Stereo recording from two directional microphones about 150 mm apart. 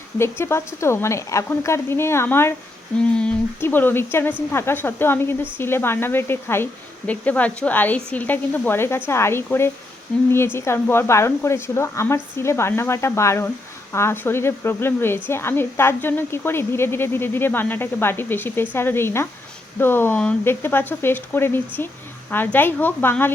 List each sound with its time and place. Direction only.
0.2 s speech: 15° left (ahead or behind)